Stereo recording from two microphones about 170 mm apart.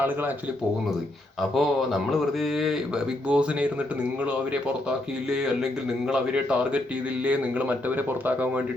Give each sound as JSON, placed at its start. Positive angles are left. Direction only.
{"t": 1.4, "sound": "speech", "side_deg": 0}